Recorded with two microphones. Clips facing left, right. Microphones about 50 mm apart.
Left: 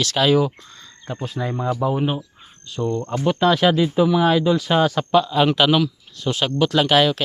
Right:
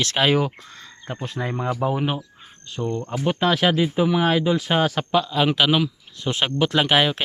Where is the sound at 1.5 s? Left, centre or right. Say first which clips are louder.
Left 2 dB; right.